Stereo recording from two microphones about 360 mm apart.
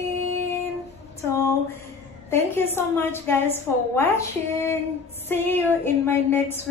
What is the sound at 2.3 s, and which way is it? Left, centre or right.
A woman's voice, centre.